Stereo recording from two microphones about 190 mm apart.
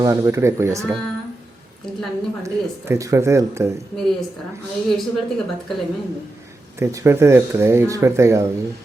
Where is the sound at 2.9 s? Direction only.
15° right (ahead or behind).